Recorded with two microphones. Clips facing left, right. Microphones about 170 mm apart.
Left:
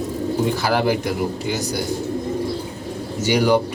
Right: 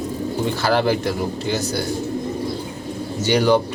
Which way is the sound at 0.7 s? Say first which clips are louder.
Right 4 dB; 10° left (ahead or behind).